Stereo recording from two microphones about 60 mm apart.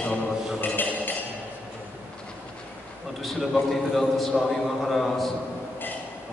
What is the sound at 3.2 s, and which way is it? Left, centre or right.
A man's voice, centre.